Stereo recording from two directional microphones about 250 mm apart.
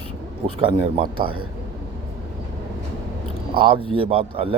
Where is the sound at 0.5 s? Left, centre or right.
Right.